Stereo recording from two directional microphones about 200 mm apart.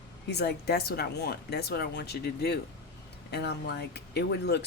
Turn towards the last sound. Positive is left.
turn(degrees=55)  # may be behind; listen again after turning